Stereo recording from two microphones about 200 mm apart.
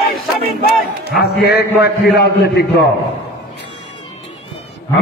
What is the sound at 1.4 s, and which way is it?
A man's voice, 55° left (ahead or behind).